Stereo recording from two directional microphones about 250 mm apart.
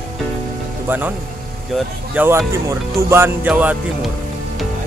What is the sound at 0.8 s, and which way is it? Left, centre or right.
Speech, centre.